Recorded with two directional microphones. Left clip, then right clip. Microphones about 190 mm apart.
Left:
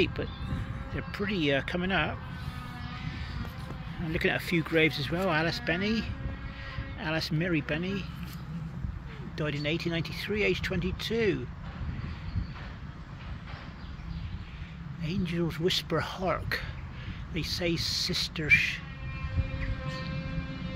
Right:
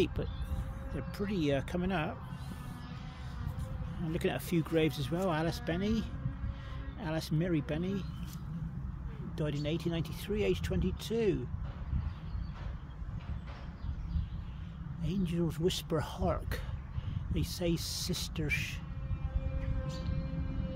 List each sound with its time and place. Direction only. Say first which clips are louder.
0.0 s speech: left 4 dB; 15° right (ahead or behind)
4.1 s speech: left 6 dB; 5° right (ahead or behind)
9.4 s speech: left 5 dB; 5° right (ahead or behind)
15.0 s speech: left 3 dB; 5° right (ahead or behind)